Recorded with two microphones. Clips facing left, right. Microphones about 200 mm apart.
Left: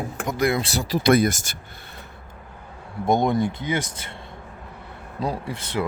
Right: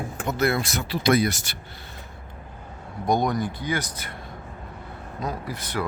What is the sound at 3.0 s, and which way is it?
Speech, 25° left (ahead or behind).